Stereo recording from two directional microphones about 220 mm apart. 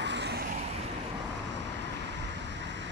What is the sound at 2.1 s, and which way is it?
Vehicle, 55° right (ahead or behind).